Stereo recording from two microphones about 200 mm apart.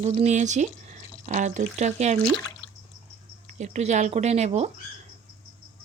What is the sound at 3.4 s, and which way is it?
Speech, 35° right (ahead or behind).